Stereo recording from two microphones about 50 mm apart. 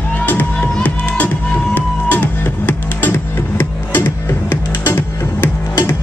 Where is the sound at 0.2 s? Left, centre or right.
Left.